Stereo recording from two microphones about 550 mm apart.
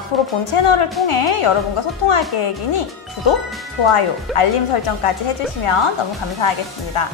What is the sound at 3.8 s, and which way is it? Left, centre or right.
Speech, left.